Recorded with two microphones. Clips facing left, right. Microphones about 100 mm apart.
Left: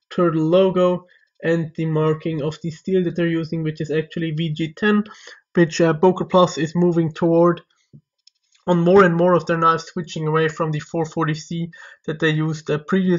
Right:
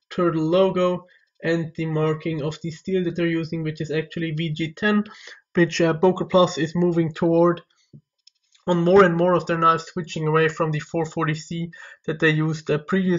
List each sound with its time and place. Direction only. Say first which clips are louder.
0.1 s speech: left 4 dB; 45° left (ahead or behind)
5.5 s speech: left 3 dB; 30° left (ahead or behind)
8.6 s speech: left 3 dB; 45° left (ahead or behind)
8.9 s speech: left 2 dB; 30° left (ahead or behind)